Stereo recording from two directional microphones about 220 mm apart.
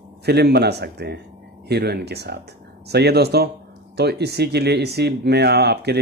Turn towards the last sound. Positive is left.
turn(degrees=-50)  # may be behind; listen again after turning